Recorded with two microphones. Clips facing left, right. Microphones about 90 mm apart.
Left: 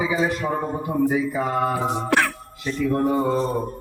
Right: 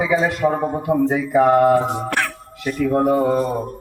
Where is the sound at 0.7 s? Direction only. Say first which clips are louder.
Right 3 dB; 65° right (ahead or behind).